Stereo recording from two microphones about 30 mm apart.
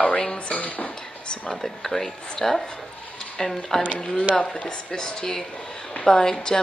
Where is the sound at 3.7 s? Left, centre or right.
Centre.